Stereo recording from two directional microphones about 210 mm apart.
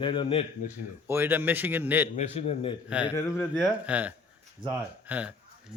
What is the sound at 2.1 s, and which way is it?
Speech, 30° left (ahead or behind).